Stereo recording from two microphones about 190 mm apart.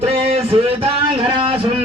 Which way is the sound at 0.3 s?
30° right (ahead or behind).